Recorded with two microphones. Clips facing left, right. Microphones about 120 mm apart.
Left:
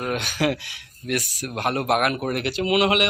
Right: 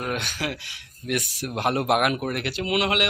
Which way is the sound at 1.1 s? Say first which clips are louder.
Even; 25° right (ahead or behind).